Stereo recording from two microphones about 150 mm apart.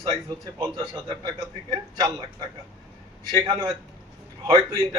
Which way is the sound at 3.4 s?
35° right (ahead or behind).